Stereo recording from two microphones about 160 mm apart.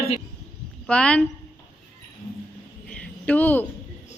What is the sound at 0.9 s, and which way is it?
Speech, 5° left (ahead or behind).